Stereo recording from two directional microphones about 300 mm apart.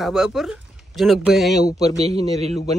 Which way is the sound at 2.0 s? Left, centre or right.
Centre.